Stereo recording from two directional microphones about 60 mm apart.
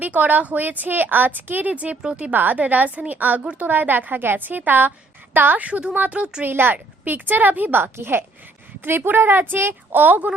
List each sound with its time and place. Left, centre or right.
0.0 s a woman's voice: right
3.4 s a woman's voice: centre
3.7 s a woman's voice: right
6.4 s a woman's voice: right